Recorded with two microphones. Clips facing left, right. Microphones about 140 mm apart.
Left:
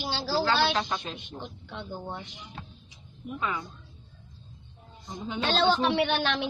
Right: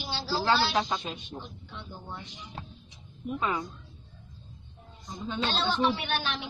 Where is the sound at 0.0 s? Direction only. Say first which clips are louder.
Left 3 dB; 70° left (ahead or behind).